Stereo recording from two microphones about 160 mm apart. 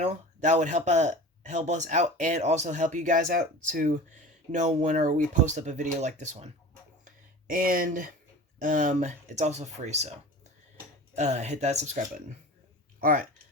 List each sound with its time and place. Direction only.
0.0 s speech: 45° right (ahead or behind)
7.0 s a sound: 60° right (ahead or behind)
8.6 s speech: 55° right (ahead or behind)
11.2 s speech: 45° right (ahead or behind)
13.0 s speech: 60° right (ahead or behind)